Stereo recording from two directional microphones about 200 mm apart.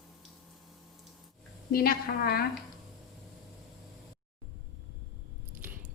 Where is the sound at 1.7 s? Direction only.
50° left (ahead or behind).